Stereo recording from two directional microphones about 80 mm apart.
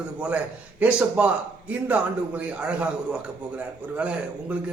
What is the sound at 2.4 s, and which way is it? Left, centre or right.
A man's voice, centre.